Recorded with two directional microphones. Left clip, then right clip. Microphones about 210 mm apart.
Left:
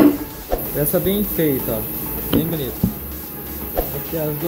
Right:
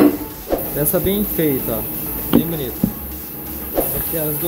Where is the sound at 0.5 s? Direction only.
Centre (ahead or behind).